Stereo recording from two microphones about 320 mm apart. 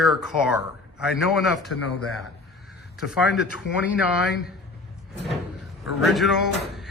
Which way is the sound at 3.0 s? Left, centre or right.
Centre.